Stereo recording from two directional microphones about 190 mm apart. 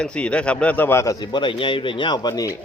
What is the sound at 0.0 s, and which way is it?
Speech, 5° left (ahead or behind).